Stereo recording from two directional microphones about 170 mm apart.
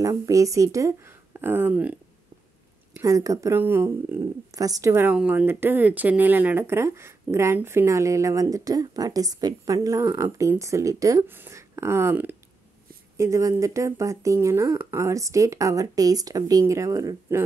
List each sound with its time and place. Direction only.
0.0 s speech: 20° right (ahead or behind)
3.0 s speech: 20° right (ahead or behind)